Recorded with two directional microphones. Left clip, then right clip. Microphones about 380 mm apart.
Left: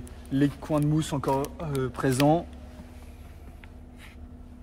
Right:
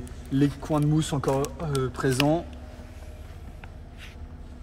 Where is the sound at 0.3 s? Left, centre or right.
Centre.